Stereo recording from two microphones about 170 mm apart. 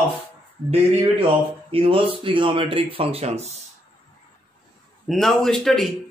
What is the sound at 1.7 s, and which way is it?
Speech, 35° right (ahead or behind).